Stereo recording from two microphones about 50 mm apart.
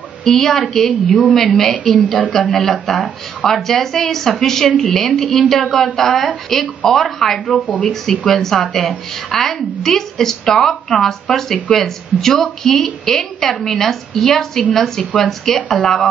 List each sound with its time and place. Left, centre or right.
0.2 s a woman's voice: centre
1.0 s a woman's voice: left
1.3 s a woman's voice: centre